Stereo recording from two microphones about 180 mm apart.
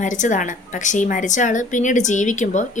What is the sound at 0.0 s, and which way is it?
Speech, 45° left (ahead or behind).